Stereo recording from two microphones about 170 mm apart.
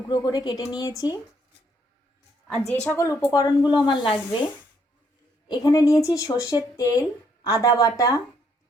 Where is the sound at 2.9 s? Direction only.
15° left (ahead or behind).